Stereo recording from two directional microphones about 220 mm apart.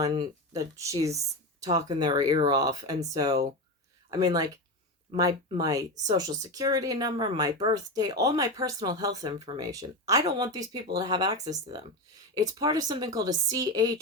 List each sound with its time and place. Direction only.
0.0 s speech: 20° right (ahead or behind)